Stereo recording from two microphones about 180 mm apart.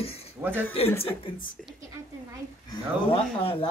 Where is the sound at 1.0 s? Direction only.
30° left (ahead or behind).